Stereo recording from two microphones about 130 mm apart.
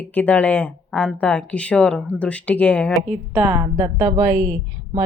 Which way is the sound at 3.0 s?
10° right (ahead or behind).